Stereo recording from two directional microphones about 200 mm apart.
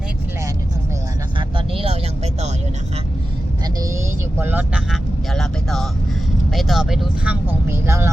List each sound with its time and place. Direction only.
1.4 s vehicle: 25° right (ahead or behind)
4.4 s vehicle: 10° right (ahead or behind)
6.5 s speech: centre (ahead or behind)